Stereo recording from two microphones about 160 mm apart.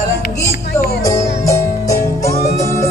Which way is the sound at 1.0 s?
20° left (ahead or behind).